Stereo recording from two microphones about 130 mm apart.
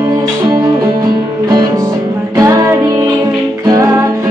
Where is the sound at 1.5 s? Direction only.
30° right (ahead or behind).